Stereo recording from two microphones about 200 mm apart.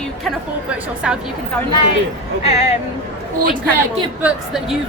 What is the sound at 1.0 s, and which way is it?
Speech, 5° right (ahead or behind).